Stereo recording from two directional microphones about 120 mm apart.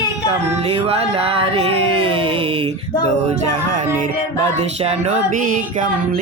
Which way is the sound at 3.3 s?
75° right (ahead or behind).